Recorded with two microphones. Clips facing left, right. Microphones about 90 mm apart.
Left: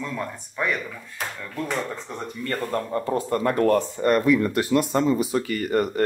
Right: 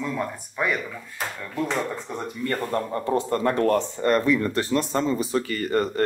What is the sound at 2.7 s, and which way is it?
Speech, 25° right (ahead or behind).